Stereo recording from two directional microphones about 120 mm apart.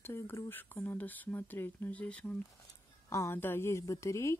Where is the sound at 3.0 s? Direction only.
25° left (ahead or behind).